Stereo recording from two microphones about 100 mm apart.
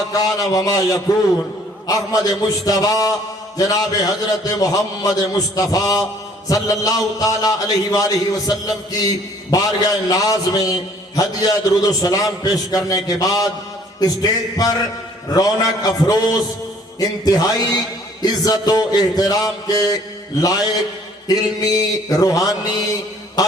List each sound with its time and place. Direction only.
0.1 s a man's voice: 35° left (ahead or behind)